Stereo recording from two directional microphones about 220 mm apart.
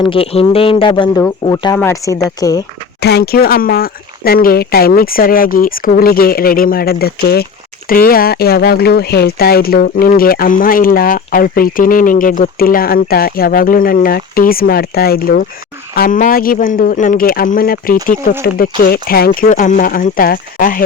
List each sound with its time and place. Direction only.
0.0 s speech: 25° left (ahead or behind)
3.0 s speech: 50° left (ahead or behind)